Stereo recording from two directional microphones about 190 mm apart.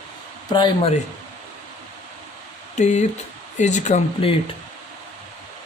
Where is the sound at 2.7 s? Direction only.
40° left (ahead or behind).